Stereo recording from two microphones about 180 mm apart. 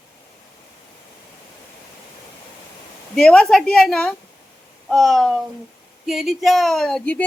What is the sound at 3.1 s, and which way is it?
Speech, 5° left (ahead or behind).